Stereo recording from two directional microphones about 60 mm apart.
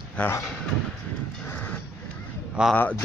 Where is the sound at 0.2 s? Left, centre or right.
Left.